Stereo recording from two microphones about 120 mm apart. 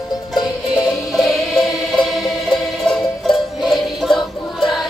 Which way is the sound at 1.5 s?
Centre (ahead or behind).